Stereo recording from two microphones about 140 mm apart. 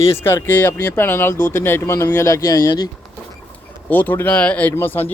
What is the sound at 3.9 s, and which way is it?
Speech, 15° left (ahead or behind).